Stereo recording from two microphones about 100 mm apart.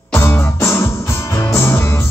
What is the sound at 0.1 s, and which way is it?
Music, 25° left (ahead or behind).